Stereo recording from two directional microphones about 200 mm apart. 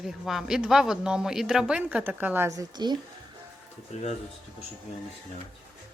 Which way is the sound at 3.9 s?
35° left (ahead or behind).